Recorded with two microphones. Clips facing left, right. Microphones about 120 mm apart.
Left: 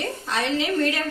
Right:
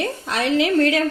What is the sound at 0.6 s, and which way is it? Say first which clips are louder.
Speech: right 9 dB; 90° right.